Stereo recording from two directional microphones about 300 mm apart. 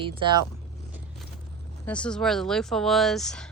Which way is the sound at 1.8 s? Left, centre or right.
Centre.